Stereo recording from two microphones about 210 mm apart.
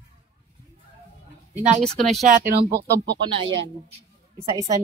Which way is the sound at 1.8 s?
Centre (ahead or behind).